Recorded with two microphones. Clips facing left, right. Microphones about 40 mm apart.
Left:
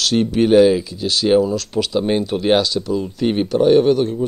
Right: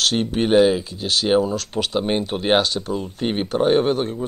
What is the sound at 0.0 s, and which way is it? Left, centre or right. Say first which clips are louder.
Speech: left 4 dB; right.